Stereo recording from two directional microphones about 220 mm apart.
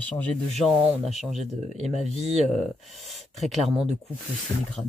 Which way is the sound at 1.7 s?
30° right (ahead or behind).